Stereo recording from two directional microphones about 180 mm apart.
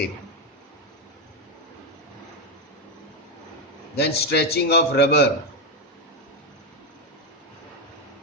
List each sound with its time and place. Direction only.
3.9 s a man's voice: 65° left (ahead or behind)